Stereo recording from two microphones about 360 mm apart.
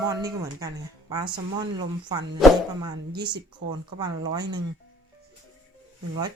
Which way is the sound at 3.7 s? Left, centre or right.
Centre.